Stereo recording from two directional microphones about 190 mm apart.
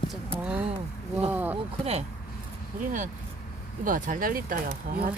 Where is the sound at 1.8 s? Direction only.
35° right (ahead or behind); by 4.5 s 50° right (ahead or behind).